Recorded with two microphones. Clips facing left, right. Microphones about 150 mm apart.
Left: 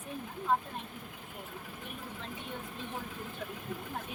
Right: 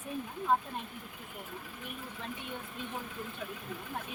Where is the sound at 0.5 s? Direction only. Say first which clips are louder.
Right 1 dB; centre (ahead or behind).